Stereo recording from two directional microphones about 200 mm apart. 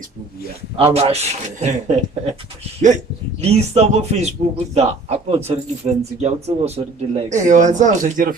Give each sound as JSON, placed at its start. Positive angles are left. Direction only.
{"t": 0.9, "sound": "a man's voice", "side_deg": -30}
{"t": 3.4, "sound": "a man's voice", "side_deg": -30}